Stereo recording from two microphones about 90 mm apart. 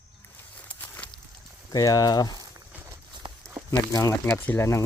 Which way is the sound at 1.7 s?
40° left (ahead or behind).